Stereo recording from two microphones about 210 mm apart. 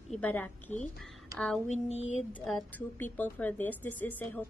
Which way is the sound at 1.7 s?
30° left (ahead or behind).